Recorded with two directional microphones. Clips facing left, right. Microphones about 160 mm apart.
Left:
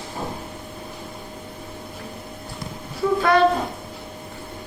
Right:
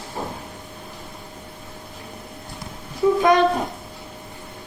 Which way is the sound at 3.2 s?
15° right (ahead or behind).